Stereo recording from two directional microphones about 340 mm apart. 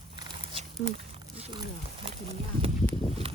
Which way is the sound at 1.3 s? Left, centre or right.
Centre.